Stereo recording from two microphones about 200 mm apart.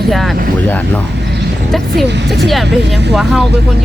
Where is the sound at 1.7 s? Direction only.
Centre (ahead or behind).